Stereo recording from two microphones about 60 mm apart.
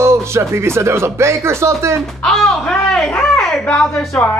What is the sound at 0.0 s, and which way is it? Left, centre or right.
Speech, right.